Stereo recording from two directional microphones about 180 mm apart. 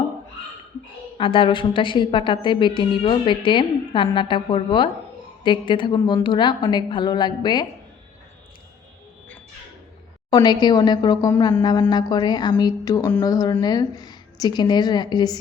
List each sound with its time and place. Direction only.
1.2 s a woman's voice: 30° left (ahead or behind)
10.2 s a woman's voice: 25° left (ahead or behind)